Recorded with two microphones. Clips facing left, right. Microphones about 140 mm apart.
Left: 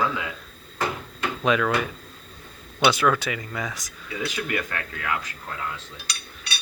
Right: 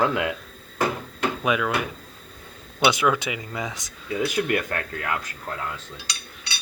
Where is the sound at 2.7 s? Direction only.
15° right (ahead or behind).